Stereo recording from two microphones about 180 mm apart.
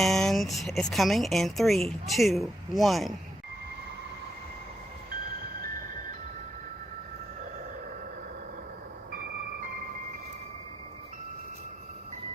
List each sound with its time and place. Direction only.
0.0 s speech: centre (ahead or behind)
9.1 s music: 50° right (ahead or behind)